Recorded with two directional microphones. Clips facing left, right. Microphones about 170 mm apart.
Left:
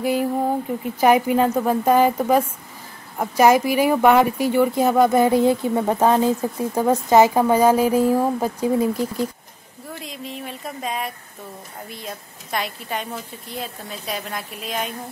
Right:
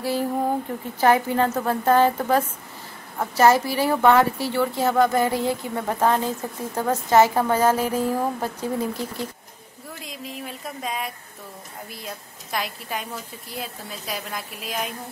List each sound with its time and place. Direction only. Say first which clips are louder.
0.0 s a woman's voice: left 3 dB; 15° left (ahead or behind)
9.9 s a woman's voice: left 2 dB; centre (ahead or behind)